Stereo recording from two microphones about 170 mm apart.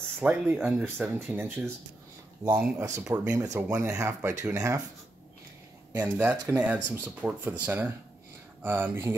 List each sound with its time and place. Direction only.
0.2 s speech: 10° right (ahead or behind)
5.9 s speech: 10° right (ahead or behind)